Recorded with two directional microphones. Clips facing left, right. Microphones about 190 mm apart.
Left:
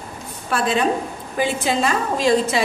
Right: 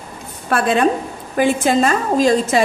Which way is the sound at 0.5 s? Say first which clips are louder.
Right 4 dB; 55° right (ahead or behind).